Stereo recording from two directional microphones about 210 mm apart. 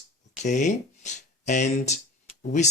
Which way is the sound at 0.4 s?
35° left (ahead or behind).